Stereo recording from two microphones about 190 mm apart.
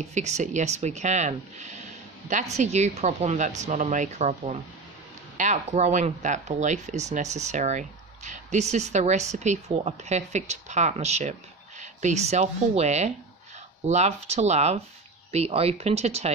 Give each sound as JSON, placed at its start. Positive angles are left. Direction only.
{"t": 0.0, "sound": "speech", "side_deg": -35}